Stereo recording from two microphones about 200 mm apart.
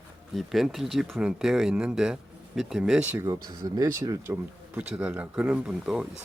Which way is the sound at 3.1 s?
15° right (ahead or behind).